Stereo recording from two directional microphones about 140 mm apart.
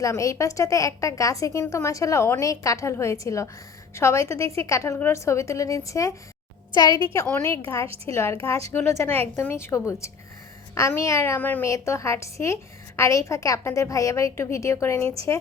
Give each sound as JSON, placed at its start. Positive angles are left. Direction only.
{"t": 0.0, "sound": "a woman's voice", "side_deg": 20}
{"t": 8.1, "sound": "a woman's voice", "side_deg": 20}